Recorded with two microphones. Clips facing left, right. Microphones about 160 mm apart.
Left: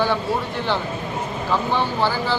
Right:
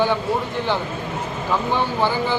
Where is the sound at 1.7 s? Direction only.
15° right (ahead or behind).